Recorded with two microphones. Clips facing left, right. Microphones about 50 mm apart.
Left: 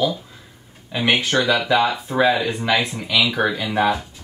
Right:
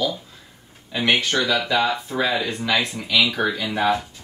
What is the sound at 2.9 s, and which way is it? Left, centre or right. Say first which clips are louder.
Speech: even; left.